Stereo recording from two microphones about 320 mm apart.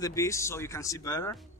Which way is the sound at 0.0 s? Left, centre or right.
Centre.